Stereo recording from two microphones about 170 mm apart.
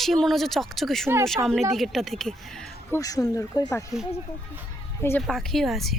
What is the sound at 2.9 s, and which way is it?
Speech, 20° left (ahead or behind).